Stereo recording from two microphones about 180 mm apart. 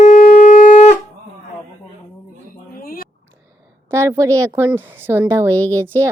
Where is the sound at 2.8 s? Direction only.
55° left (ahead or behind).